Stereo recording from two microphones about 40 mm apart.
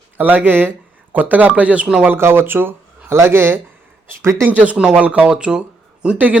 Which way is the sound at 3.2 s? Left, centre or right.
Right.